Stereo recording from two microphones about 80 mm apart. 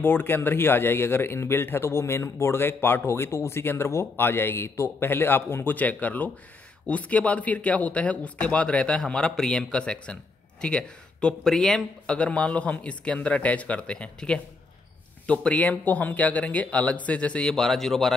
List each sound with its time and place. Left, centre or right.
0.0 s speech: left; by 18.1 s centre